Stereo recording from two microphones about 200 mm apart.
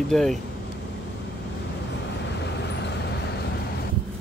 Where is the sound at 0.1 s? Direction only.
Centre (ahead or behind).